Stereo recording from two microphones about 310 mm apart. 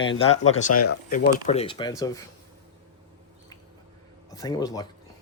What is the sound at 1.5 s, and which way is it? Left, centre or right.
Speech, centre.